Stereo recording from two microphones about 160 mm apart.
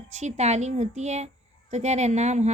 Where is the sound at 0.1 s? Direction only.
45° right (ahead or behind).